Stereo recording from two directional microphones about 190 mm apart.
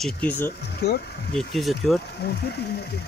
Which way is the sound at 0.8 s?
60° left (ahead or behind).